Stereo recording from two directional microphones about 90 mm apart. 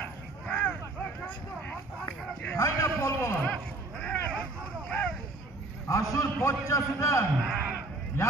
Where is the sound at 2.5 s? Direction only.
35° left (ahead or behind).